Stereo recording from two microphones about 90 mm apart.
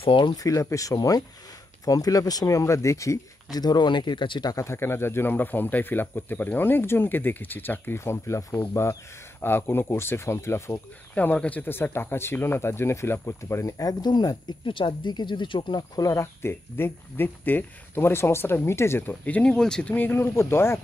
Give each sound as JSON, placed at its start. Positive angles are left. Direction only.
{"t": 0.2, "sound": "speech", "side_deg": 40}
{"t": 3.5, "sound": "speech", "side_deg": 50}
{"t": 4.5, "sound": "speech", "side_deg": 35}
{"t": 11.1, "sound": "speech", "side_deg": 15}
{"t": 14.7, "sound": "speech", "side_deg": 65}
{"t": 16.0, "sound": "speech", "side_deg": 40}
{"t": 16.4, "sound": "speech", "side_deg": 25}
{"t": 19.9, "sound": "speech", "side_deg": 20}